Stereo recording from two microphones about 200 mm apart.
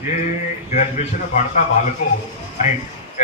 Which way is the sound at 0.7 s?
35° left (ahead or behind).